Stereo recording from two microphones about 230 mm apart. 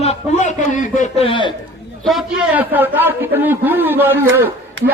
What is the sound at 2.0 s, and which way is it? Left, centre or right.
A man's voice, centre.